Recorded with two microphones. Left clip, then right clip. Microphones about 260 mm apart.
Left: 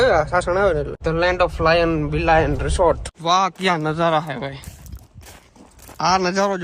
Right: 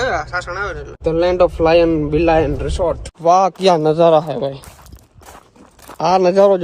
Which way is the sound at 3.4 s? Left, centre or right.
Centre.